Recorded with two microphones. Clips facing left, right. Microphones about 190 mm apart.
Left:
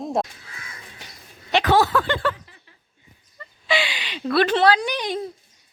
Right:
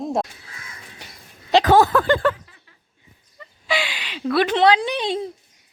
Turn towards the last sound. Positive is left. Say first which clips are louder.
# right 2 dB
turn(degrees=-25)  # may be behind; listen again after turning